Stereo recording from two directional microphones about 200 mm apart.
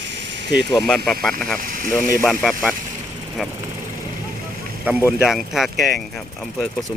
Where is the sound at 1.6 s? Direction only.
45° right (ahead or behind).